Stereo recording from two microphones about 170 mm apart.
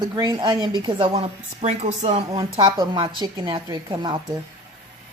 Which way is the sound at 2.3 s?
25° right (ahead or behind).